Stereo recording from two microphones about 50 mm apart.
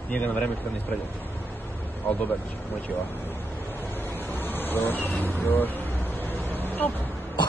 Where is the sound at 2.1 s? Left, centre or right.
Left.